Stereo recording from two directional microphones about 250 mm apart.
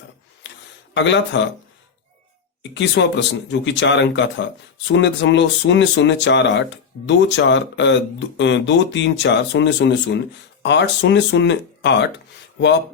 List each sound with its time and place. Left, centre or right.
0.9 s speech: left
2.7 s speech: left